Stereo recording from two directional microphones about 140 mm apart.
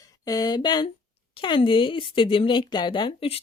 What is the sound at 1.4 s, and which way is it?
Speech, 35° left (ahead or behind).